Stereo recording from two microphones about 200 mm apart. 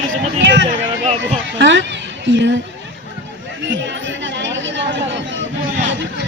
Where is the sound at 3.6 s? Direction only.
60° right (ahead or behind).